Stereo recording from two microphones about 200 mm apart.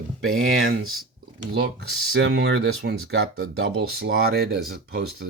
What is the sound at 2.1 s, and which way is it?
Speech, 55° right (ahead or behind).